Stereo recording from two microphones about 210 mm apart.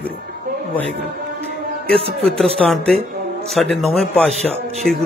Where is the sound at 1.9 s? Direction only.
25° right (ahead or behind).